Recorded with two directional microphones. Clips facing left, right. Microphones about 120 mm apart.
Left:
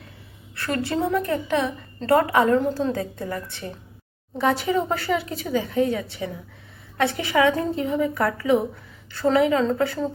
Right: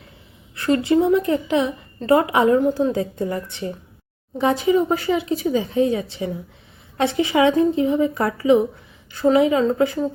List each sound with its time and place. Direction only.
0.5 s a woman's voice: 20° right (ahead or behind)